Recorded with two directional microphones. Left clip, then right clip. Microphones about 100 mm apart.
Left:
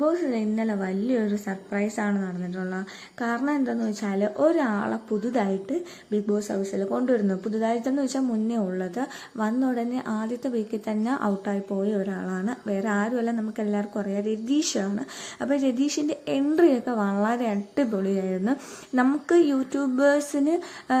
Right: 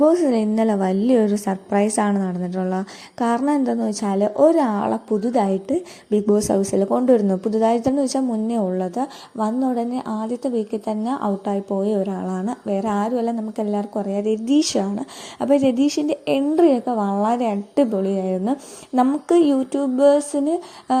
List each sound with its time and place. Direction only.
0.0 s a woman's voice: 85° right; by 4.3 s 55° right (ahead or behind)
4.4 s a woman's voice: 40° right (ahead or behind); by 6.8 s 90° right
7.0 s a woman's voice: 55° right (ahead or behind); by 21.0 s 20° right (ahead or behind)